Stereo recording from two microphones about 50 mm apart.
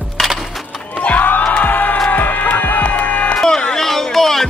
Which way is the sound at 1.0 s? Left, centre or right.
Left.